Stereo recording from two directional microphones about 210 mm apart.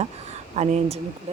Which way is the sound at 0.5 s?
30° right (ahead or behind).